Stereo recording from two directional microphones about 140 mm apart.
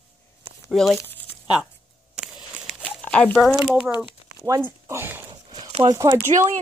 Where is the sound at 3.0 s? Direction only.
10° left (ahead or behind).